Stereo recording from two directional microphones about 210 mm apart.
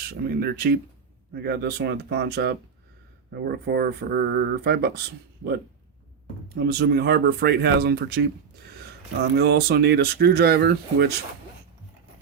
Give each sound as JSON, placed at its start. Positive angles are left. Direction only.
{"t": 0.1, "sound": "speech", "side_deg": -50}
{"t": 6.5, "sound": "speech", "side_deg": -50}
{"t": 9.3, "sound": "speech", "side_deg": -50}